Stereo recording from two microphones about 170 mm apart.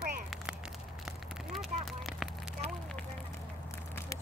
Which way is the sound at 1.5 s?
Centre (ahead or behind).